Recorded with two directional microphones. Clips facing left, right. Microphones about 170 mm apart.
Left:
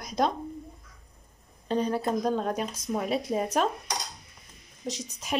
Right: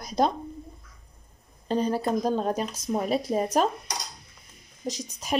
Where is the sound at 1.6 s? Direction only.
35° right (ahead or behind).